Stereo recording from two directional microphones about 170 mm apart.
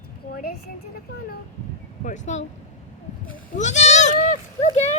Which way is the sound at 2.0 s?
45° left (ahead or behind).